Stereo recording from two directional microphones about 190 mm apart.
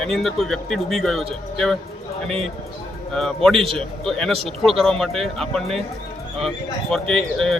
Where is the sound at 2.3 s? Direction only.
5° left (ahead or behind).